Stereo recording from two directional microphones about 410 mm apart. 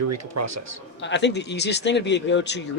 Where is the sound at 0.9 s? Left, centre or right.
Left.